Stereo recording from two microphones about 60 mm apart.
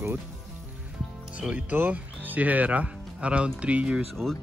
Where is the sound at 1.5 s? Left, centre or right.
Right.